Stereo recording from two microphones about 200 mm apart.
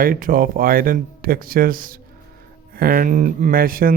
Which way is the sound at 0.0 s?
45° right (ahead or behind).